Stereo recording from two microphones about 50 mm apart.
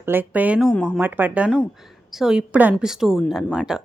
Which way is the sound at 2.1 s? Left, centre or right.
Centre.